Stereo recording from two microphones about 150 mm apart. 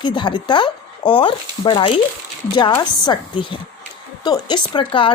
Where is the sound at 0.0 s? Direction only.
30° left (ahead or behind).